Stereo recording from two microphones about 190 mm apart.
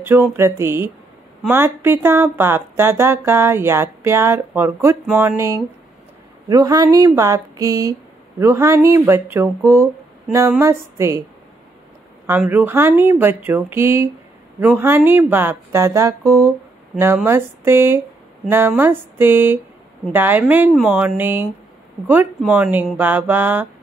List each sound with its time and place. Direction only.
0.0 s speech: 10° right (ahead or behind)
12.3 s speech: 10° right (ahead or behind)